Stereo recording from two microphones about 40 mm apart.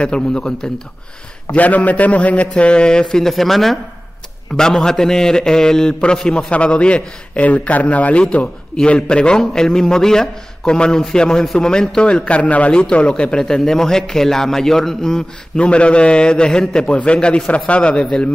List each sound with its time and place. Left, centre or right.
0.0 s a man's voice: left
1.5 s a man's voice: left
2.4 s a man's voice: left; by 3.8 s centre
4.6 s a man's voice: centre
6.2 s a man's voice: left; by 15.6 s centre
15.6 s a man's voice: left